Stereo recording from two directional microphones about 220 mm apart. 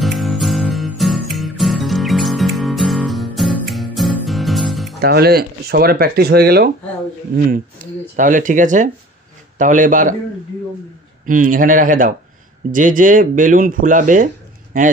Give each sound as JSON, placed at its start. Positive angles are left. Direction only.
{"t": 0.0, "sound": "music", "side_deg": 0}
{"t": 5.0, "sound": "speech", "side_deg": -45}
{"t": 11.2, "sound": "speech", "side_deg": -35}